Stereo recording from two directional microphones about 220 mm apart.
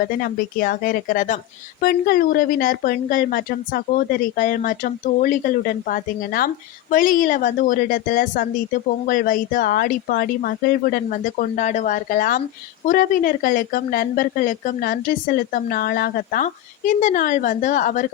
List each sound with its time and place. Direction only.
0.2 s a woman's voice: 40° left (ahead or behind)